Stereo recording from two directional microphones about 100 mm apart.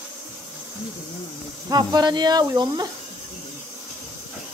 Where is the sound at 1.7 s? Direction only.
40° right (ahead or behind).